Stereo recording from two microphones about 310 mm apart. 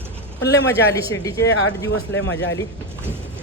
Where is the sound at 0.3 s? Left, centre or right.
Left.